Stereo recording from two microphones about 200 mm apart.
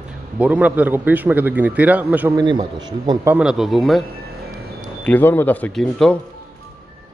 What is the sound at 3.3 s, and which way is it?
Speech, 5° right (ahead or behind).